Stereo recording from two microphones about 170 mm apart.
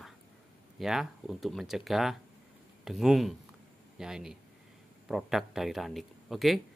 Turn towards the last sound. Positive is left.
turn(degrees=0)  # may be behind; listen again after turning